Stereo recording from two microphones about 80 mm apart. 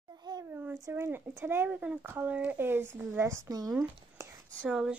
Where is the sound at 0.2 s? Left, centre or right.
Right.